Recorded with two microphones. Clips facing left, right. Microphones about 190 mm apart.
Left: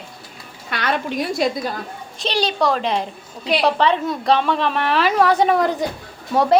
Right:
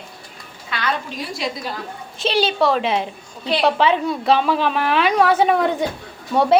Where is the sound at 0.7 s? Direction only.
55° left (ahead or behind).